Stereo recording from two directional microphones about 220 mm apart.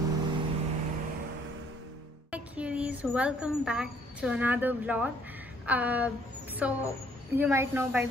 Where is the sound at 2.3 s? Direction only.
5° right (ahead or behind).